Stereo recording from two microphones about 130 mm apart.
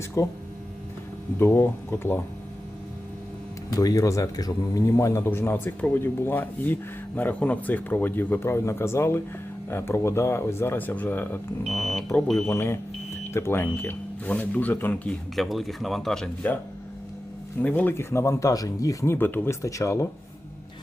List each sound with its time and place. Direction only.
0.2 s speech: 25° left (ahead or behind)
1.4 s speech: 20° left (ahead or behind)
3.8 s speech: 25° left (ahead or behind)
11.6 s speech: centre (ahead or behind)
12.5 s speech: 20° left (ahead or behind)
17.6 s speech: 10° left (ahead or behind)